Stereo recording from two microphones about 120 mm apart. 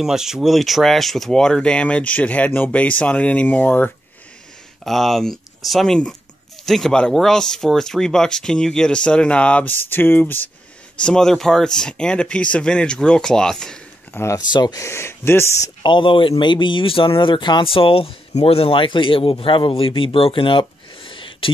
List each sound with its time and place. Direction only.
0.0 s speech: 5° right (ahead or behind); by 3.9 s 15° left (ahead or behind)
4.8 s speech: centre (ahead or behind)
14.1 s speech: 25° left (ahead or behind)
15.8 s a man's voice: 45° left (ahead or behind)